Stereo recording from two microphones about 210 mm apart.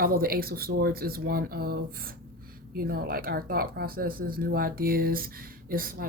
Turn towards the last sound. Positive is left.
turn(degrees=-45)  # may be behind; listen again after turning